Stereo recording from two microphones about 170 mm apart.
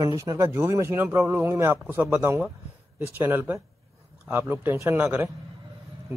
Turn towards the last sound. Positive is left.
turn(degrees=-10)  # may be behind; listen again after turning